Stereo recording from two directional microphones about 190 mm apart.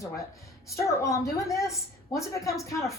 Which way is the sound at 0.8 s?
15° left (ahead or behind).